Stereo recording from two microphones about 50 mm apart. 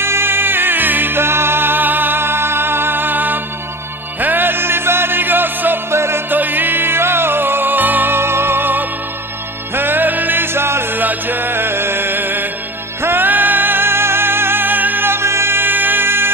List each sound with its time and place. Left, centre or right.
0.0 s music: right
5.9 s music: right
6.3 s music: right